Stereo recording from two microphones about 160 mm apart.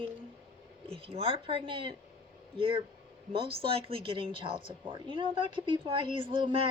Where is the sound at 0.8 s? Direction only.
35° right (ahead or behind).